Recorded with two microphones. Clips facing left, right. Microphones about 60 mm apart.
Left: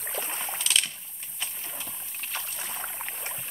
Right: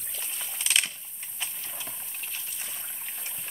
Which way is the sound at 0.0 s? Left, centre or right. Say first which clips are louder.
Left 7 dB; left.